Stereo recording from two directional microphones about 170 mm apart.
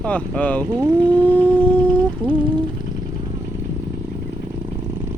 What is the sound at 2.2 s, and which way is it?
Speech, 30° right (ahead or behind).